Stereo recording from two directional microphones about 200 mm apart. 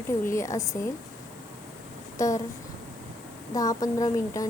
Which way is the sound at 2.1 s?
15° left (ahead or behind).